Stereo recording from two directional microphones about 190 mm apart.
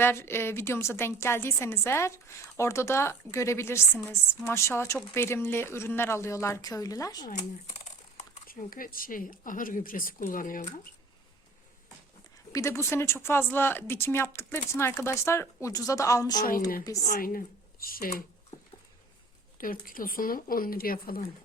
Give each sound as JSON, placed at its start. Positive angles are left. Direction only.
{"t": 0.0, "sound": "a woman's voice", "side_deg": 10}
{"t": 7.3, "sound": "speech", "side_deg": 40}
{"t": 12.5, "sound": "a woman's voice", "side_deg": 15}
{"t": 16.4, "sound": "speech", "side_deg": 50}
{"t": 19.5, "sound": "speech", "side_deg": 45}